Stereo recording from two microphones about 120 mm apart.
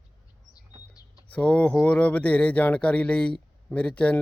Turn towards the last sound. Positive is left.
turn(degrees=10)  # may be behind; listen again after turning